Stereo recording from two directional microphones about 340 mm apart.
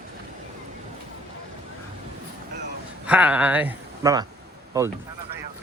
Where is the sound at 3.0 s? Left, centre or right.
Centre.